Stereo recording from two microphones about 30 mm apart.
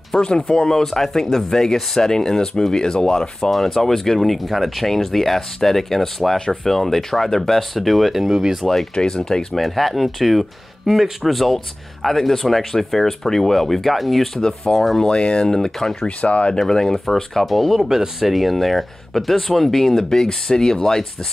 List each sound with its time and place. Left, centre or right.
0.2 s speech: left
0.7 s speech: centre
3.5 s speech: centre
6.3 s speech: left; by 8.4 s centre
8.6 s speech: centre
9.6 s speech: centre
14.4 s speech: centre
15.0 s speech: left; by 16.1 s centre
16.2 s speech: left
16.5 s speech: centre
17.0 s speech: centre
17.8 s speech: centre
18.2 s speech: centre
20.1 s speech: centre